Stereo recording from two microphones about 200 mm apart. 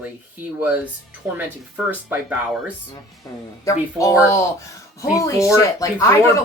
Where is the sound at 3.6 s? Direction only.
15° left (ahead or behind).